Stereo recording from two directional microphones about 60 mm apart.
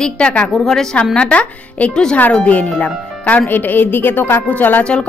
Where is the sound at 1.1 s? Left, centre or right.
Centre.